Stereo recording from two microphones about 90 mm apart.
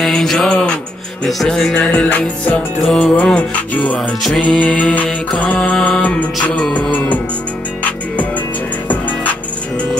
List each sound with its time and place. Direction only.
0.0 s music: 5° left (ahead or behind)
1.2 s mantra: 5° left (ahead or behind)
2.8 s music: 5° left (ahead or behind)
3.2 s mantra: 15° left (ahead or behind)
8.8 s music: 20° left (ahead or behind)